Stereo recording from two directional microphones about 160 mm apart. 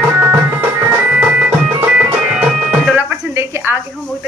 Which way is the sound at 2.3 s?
5° right (ahead or behind).